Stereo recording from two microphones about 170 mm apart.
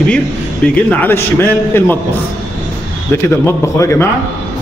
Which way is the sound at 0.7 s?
10° left (ahead or behind).